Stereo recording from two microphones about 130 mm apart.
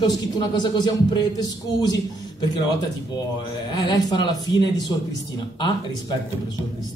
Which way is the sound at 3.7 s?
30° left (ahead or behind).